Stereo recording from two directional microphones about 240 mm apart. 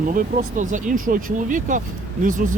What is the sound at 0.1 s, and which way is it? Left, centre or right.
Speech, right.